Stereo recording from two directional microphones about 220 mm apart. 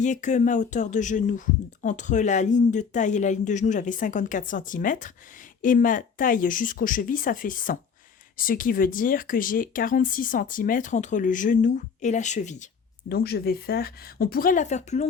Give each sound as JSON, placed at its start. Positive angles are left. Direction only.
{"t": 0.0, "sound": "speech", "side_deg": 35}
{"t": 13.1, "sound": "speech", "side_deg": 45}